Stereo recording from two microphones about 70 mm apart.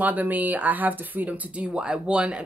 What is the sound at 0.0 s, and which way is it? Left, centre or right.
Speech, right.